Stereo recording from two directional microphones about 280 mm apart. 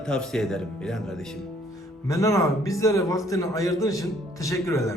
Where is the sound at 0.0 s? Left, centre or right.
Centre.